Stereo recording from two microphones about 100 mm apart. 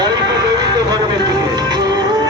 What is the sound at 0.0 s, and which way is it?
Music, 40° right (ahead or behind).